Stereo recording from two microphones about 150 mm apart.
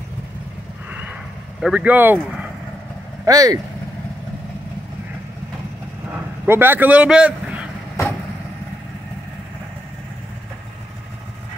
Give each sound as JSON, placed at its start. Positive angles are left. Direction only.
{"t": 1.6, "sound": "speech", "side_deg": -10}
{"t": 3.3, "sound": "speech", "side_deg": -25}
{"t": 6.4, "sound": "vehicle", "side_deg": -15}